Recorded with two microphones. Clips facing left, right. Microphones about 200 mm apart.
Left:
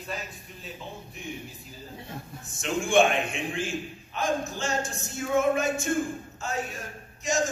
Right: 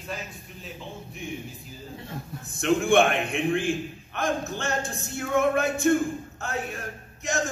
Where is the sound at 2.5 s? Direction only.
60° right (ahead or behind).